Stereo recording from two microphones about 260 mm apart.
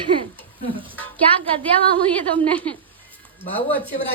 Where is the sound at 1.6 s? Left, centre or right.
Centre.